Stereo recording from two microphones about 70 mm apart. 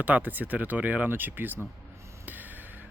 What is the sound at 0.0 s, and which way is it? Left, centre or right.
Speech, right.